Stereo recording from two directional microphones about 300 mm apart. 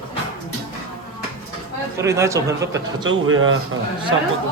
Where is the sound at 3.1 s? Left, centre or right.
Right.